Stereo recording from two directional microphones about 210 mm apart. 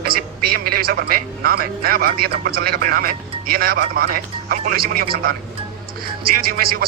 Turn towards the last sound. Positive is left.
turn(degrees=-45)  # may be behind; listen again after turning